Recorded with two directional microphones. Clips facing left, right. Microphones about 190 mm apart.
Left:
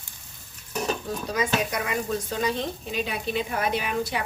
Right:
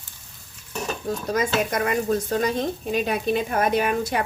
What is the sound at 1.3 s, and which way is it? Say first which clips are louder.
Speech: right 3 dB; 45° right (ahead or behind).